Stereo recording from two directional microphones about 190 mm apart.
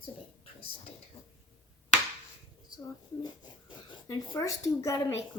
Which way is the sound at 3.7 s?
20° left (ahead or behind).